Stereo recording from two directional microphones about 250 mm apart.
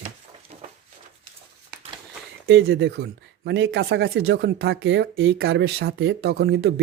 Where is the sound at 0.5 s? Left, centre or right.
Right.